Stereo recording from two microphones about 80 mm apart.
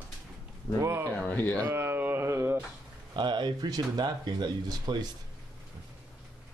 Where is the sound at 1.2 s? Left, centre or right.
Centre.